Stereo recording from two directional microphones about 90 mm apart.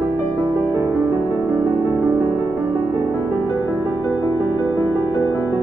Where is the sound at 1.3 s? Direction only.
25° right (ahead or behind).